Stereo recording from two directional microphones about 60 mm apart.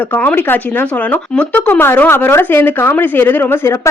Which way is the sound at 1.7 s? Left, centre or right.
Left.